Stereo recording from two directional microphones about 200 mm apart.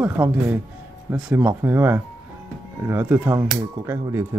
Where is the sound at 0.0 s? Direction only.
10° right (ahead or behind).